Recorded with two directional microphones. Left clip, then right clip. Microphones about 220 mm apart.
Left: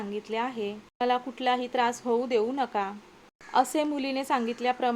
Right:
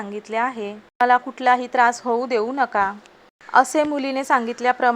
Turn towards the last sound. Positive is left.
turn(degrees=-10)  # may be behind; listen again after turning